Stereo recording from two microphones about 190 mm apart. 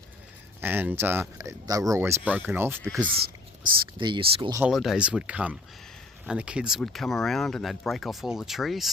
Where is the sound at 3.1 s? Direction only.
55° right (ahead or behind).